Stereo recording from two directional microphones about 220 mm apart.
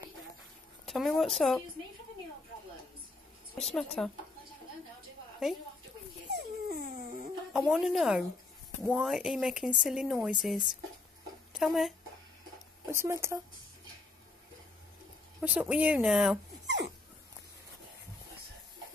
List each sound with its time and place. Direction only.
0.8 s speech: centre (ahead or behind)
3.5 s speech: 5° left (ahead or behind)
6.3 s dog: 40° right (ahead or behind)
7.5 s speech: centre (ahead or behind)
12.8 s speech: 15° right (ahead or behind)
15.4 s speech: 5° right (ahead or behind)
16.6 s dog: 50° right (ahead or behind)